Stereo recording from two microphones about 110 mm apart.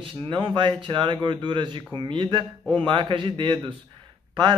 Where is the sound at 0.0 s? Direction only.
50° right (ahead or behind).